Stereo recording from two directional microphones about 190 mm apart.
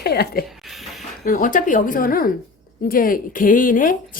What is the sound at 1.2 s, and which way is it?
A woman's voice, 45° left (ahead or behind).